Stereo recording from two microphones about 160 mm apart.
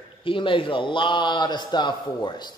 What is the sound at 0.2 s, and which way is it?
A man's voice, 30° left (ahead or behind).